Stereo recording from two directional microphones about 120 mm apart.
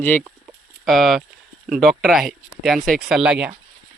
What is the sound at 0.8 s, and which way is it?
Speech, centre (ahead or behind).